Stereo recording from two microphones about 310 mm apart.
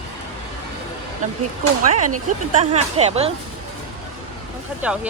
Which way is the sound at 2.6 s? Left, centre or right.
Right.